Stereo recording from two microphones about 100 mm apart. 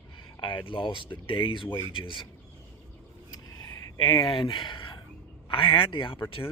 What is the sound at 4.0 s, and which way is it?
Speech, 55° left (ahead or behind).